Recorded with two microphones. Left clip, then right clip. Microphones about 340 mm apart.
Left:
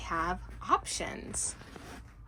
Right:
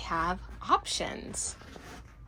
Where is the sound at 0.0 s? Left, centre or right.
Centre.